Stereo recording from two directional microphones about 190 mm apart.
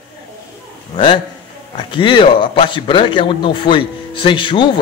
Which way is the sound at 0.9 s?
25° left (ahead or behind).